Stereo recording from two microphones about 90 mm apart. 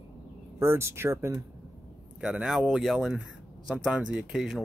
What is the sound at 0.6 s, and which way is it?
Speech, 30° right (ahead or behind).